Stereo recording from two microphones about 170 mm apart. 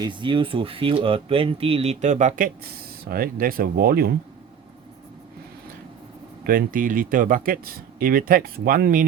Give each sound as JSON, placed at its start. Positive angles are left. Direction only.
{"t": 0.0, "sound": "speech", "side_deg": -30}
{"t": 6.4, "sound": "speech", "side_deg": -55}